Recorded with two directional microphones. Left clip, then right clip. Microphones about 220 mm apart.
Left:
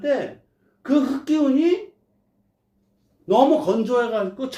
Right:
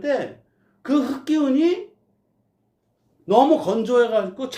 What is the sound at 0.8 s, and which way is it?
Speech, 40° right (ahead or behind).